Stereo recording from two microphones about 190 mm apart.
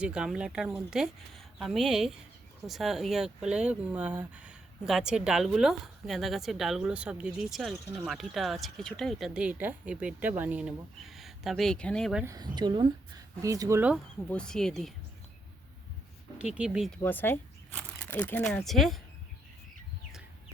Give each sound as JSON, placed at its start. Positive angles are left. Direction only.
{"t": 0.0, "sound": "speech", "side_deg": -5}
{"t": 12.2, "sound": "a woman's voice", "side_deg": -15}
{"t": 14.3, "sound": "speech", "side_deg": 5}
{"t": 16.4, "sound": "speech", "side_deg": -5}
{"t": 17.0, "sound": "speech", "side_deg": 10}